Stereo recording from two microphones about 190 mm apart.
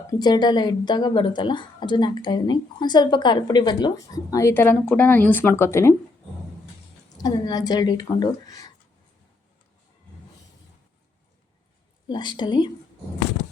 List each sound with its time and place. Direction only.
0.1 s speech: 20° left (ahead or behind)
7.2 s speech: 20° left (ahead or behind)
12.0 s speech: 25° left (ahead or behind)